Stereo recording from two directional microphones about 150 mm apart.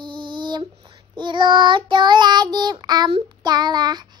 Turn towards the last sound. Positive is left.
turn(degrees=-30)  # may be behind; listen again after turning